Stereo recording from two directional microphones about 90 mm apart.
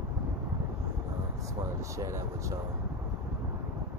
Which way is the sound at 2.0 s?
35° right (ahead or behind).